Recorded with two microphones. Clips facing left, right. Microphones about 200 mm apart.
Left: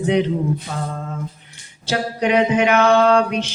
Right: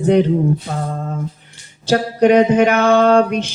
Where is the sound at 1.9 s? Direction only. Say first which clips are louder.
Right 7 dB; 45° right (ahead or behind).